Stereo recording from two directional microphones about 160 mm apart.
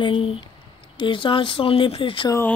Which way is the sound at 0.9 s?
30° left (ahead or behind).